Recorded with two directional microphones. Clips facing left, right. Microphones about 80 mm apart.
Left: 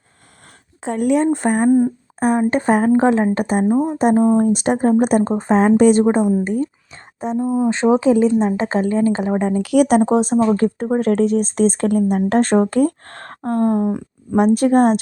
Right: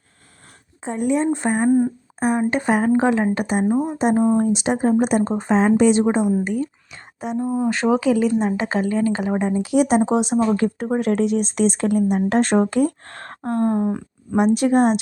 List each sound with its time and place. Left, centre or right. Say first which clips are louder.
0.8 s speech: left 4 dB; left
2.5 s speech: left 3 dB; left
4.4 s speech: left 3 dB; left
7.3 s speech: left 3 dB; centre
7.7 s speech: left 4 dB; left
9.6 s speech: left 4 dB; left
10.1 s speech: left 3 dB; left
13.5 s speech: left 3 dB; right
14.3 s speech: left 3 dB; left